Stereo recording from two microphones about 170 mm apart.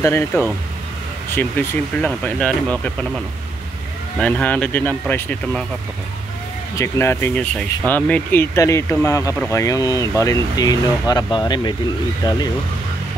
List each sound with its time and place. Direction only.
0.0 s speech: 15° left (ahead or behind)
4.2 s speech: 5° left (ahead or behind)
6.8 s speech: 15° left (ahead or behind)